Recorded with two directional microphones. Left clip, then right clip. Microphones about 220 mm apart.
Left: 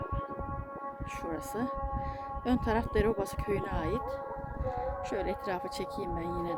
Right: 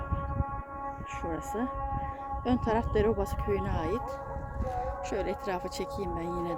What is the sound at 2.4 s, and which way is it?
Speech, 10° right (ahead or behind).